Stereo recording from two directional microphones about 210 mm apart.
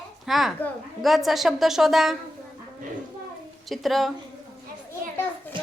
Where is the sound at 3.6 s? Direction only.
Centre (ahead or behind).